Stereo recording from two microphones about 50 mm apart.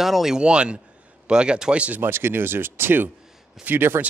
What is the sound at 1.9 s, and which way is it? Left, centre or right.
Speech, right.